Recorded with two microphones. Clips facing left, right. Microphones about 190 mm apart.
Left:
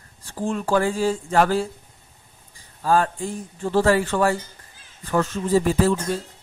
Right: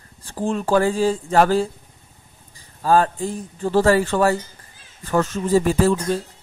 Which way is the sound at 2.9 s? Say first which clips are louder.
Right 3 dB; 35° right (ahead or behind).